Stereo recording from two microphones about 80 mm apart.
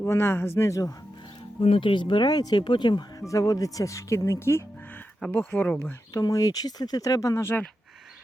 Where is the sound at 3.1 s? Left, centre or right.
Left.